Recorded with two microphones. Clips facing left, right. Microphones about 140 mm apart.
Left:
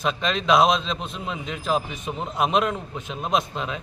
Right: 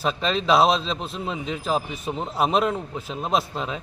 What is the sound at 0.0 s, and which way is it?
A man's voice, 35° right (ahead or behind).